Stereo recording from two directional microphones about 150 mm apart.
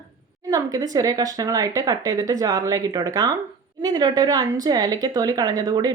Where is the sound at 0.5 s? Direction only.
25° right (ahead or behind).